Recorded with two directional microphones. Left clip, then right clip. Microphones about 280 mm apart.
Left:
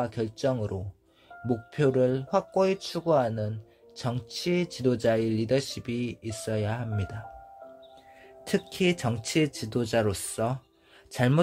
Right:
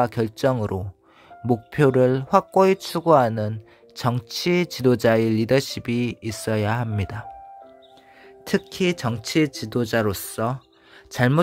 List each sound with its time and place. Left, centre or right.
0.0 s speech: right
8.5 s speech: right